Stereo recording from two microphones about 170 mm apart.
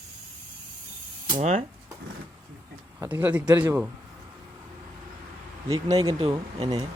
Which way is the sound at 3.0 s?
10° right (ahead or behind).